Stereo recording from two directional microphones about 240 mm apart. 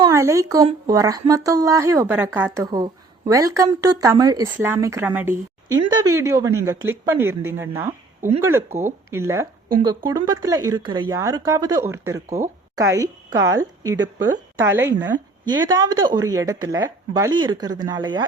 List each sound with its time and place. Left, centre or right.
0.0 s a woman's voice: centre
7.8 s a sound: centre
8.5 s a woman's voice: centre